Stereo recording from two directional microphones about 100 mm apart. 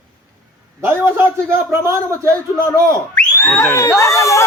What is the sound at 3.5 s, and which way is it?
Speech, 25° left (ahead or behind).